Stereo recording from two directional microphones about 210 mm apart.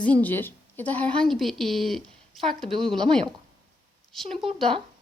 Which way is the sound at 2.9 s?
5° left (ahead or behind).